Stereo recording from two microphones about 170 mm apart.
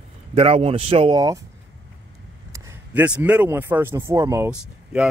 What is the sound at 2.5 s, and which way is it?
Speech, 15° right (ahead or behind).